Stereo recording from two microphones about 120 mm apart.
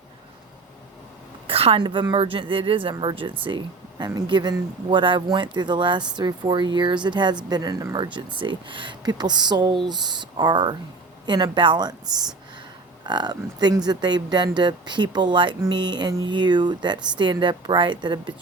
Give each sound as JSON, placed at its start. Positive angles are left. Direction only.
{"t": 1.5, "sound": "a sound", "side_deg": -55}
{"t": 1.8, "sound": "speech", "side_deg": -40}
{"t": 3.9, "sound": "speech", "side_deg": -35}
{"t": 13.1, "sound": "speech", "side_deg": -35}